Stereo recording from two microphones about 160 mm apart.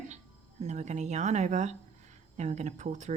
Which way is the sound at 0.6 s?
45° right (ahead or behind).